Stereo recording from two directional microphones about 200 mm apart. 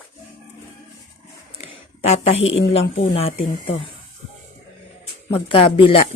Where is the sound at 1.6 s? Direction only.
30° left (ahead or behind).